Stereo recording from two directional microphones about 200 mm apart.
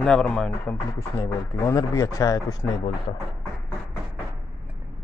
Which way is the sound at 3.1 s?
30° left (ahead or behind).